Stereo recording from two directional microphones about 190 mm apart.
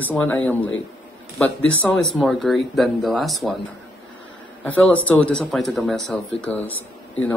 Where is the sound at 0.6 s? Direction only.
90° left.